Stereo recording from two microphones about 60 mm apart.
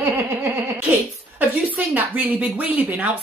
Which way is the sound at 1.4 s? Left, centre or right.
Right.